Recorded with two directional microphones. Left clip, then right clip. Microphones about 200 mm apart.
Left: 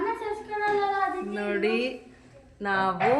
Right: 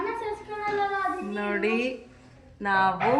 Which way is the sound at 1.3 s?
5° right (ahead or behind).